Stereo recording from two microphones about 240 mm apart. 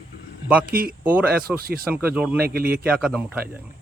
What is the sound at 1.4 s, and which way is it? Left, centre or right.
Speech, right.